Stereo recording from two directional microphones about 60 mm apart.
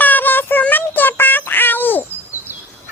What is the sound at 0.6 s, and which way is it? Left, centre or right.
Synthetic singing, left.